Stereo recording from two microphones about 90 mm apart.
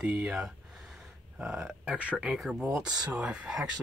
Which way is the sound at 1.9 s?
15° right (ahead or behind).